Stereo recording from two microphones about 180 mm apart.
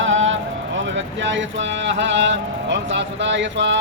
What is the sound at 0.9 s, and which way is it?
Vehicle, 90° right.